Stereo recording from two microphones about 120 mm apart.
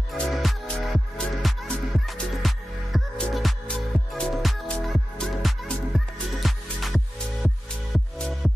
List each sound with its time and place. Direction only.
0.1 s music: centre (ahead or behind)